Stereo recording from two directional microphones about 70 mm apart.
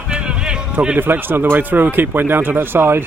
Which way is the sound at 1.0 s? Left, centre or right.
Right.